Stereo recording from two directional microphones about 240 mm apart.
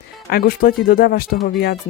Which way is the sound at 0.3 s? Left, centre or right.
Left.